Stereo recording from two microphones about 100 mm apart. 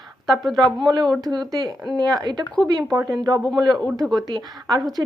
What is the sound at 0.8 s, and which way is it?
A woman's voice, 45° right (ahead or behind).